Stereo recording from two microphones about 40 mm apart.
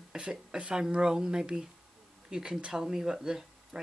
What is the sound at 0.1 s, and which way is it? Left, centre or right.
Speech, centre.